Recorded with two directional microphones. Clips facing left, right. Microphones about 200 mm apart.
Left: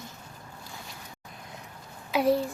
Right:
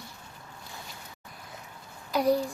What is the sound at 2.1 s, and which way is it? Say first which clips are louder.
Speech: left 1 dB; 5° left (ahead or behind).